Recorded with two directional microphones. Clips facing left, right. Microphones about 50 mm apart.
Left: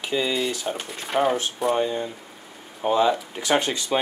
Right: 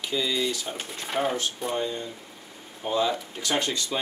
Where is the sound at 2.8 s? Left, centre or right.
Left.